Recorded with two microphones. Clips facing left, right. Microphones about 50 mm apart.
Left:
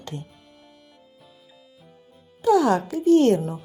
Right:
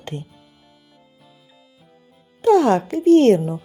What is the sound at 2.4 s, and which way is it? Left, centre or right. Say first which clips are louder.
Speech: right 4 dB; right.